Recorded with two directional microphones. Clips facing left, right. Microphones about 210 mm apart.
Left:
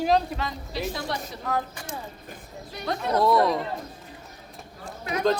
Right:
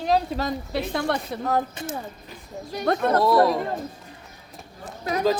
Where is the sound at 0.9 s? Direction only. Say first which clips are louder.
Right 7 dB; 60° right (ahead or behind).